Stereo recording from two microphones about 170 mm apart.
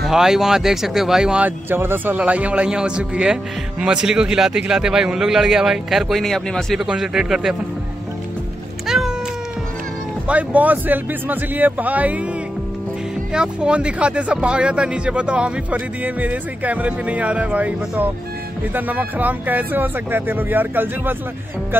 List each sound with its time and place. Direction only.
0.0 s a man's voice: centre (ahead or behind)
8.8 s cat: centre (ahead or behind)
10.2 s speech: 10° right (ahead or behind)
13.3 s speech: 5° right (ahead or behind)